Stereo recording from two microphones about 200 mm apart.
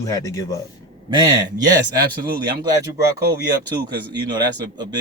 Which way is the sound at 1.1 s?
20° right (ahead or behind).